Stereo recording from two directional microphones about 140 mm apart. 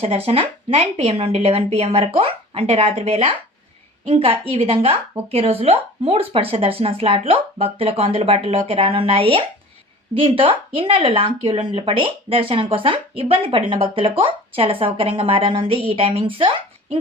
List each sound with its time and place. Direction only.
0.0 s a woman's voice: 45° right (ahead or behind)